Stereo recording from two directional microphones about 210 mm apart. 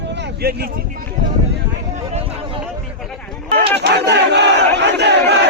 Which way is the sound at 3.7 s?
55° right (ahead or behind).